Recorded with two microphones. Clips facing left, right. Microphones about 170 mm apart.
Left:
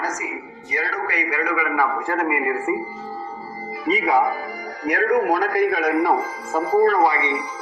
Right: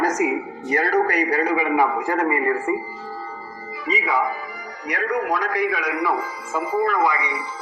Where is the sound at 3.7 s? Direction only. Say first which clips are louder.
Left 4 dB; 40° left (ahead or behind).